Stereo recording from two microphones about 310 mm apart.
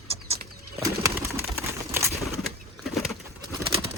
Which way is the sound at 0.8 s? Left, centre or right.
Centre.